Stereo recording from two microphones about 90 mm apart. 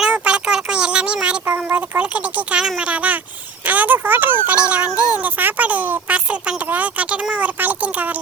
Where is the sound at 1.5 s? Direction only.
20° right (ahead or behind).